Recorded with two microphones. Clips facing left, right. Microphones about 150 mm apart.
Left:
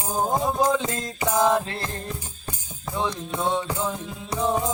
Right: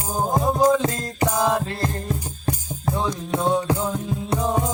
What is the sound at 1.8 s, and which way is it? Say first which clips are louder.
Music: right 6 dB; 40° right (ahead or behind).